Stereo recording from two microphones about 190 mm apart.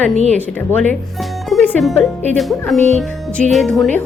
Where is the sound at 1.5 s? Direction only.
Centre (ahead or behind).